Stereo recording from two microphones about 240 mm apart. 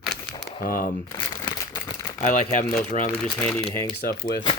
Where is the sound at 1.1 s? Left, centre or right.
Centre.